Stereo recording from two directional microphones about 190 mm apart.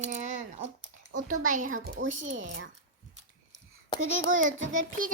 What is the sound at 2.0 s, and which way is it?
Speech, 85° right.